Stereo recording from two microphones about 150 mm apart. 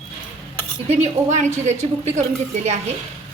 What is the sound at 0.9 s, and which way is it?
A woman's voice, 50° right (ahead or behind).